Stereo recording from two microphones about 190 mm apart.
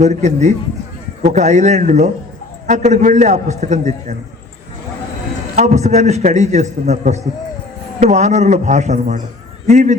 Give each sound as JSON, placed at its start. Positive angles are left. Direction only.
{"t": 0.0, "sound": "a man's voice", "side_deg": -40}
{"t": 5.5, "sound": "a man's voice", "side_deg": -35}